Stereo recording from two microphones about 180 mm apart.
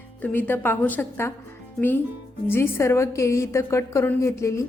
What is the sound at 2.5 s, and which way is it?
A woman's voice, 15° left (ahead or behind).